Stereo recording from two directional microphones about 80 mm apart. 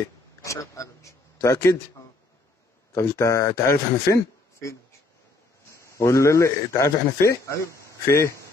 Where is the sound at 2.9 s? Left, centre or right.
Left.